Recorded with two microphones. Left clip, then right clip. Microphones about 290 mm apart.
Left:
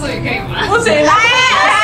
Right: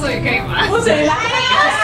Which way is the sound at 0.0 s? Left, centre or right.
Centre.